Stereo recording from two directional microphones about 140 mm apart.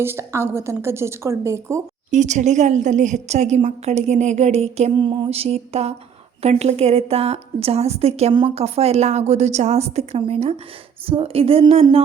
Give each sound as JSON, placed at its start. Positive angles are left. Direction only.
{"t": 0.0, "sound": "a woman's voice", "side_deg": -20}
{"t": 2.0, "sound": "a woman's voice", "side_deg": -55}
{"t": 4.9, "sound": "a woman's voice", "side_deg": -35}
{"t": 8.3, "sound": "a woman's voice", "side_deg": -35}
{"t": 8.5, "sound": "a woman's voice", "side_deg": -45}